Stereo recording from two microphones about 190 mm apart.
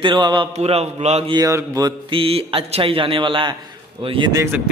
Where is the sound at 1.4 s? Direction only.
20° right (ahead or behind).